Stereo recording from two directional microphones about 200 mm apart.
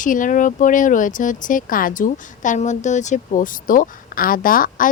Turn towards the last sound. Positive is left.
turn(degrees=45)  # may be behind; listen again after turning